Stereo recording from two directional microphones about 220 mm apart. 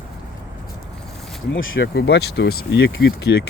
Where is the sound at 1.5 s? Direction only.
60° left (ahead or behind).